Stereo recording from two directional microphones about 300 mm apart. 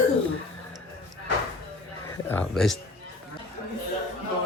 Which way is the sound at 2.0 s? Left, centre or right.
Centre.